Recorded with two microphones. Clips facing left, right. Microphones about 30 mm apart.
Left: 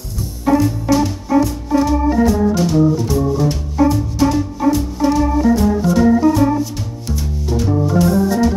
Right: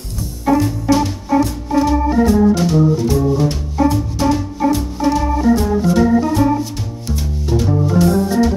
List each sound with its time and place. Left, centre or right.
0.5 s music: centre
1.9 s organ: centre
7.2 s music: centre